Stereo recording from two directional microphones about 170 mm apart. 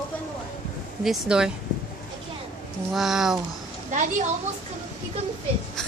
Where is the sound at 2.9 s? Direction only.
Centre (ahead or behind).